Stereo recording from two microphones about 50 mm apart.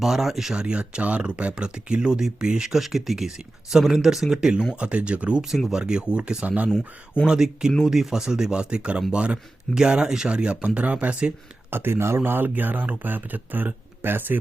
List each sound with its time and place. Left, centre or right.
0.0 s speech: centre
0.5 s speech: centre
4.8 s speech: right
5.4 s speech: centre
5.8 s speech: centre
7.3 s speech: centre
11.7 s speech: right